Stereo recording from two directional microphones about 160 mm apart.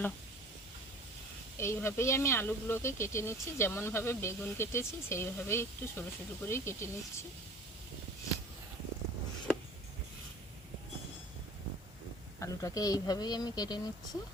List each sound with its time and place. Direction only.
1.5 s speech: 15° left (ahead or behind)
12.4 s speech: 20° left (ahead or behind)